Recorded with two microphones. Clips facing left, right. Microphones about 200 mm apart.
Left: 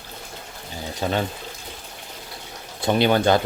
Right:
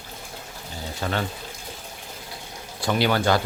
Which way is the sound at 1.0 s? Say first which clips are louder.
Left 4 dB; 15° left (ahead or behind).